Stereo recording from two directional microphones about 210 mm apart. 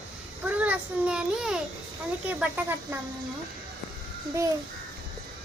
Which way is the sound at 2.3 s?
5° right (ahead or behind).